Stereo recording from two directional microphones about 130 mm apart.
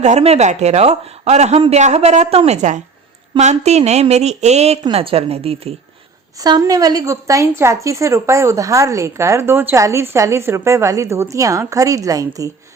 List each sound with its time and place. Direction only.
0.0 s speech: 55° right (ahead or behind)
4.8 s a woman's voice: 45° right (ahead or behind)
6.4 s a woman's voice: 30° right (ahead or behind)